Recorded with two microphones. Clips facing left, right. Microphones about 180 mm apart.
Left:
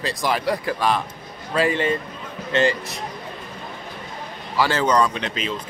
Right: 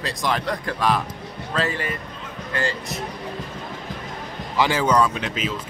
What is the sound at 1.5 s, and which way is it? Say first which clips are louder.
Speech: left 4 dB; 10° left (ahead or behind).